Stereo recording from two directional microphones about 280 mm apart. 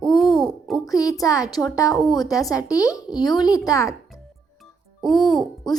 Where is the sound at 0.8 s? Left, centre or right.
Centre.